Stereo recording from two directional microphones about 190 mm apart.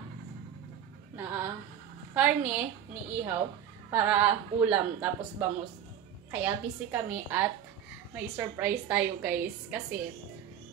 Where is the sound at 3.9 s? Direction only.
10° right (ahead or behind).